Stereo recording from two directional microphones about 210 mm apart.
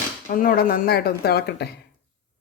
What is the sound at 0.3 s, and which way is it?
Cutlery, 40° left (ahead or behind).